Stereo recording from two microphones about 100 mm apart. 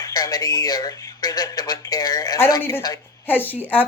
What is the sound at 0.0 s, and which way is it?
A man's voice, 40° left (ahead or behind).